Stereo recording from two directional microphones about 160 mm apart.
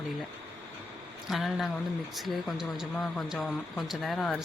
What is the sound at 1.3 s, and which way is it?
Speech, centre (ahead or behind).